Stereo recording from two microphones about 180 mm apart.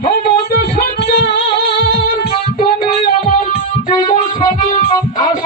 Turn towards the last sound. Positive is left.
turn(degrees=25)  # may be behind; listen again after turning